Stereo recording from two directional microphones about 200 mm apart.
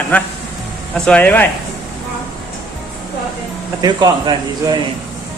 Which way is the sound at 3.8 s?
20° right (ahead or behind).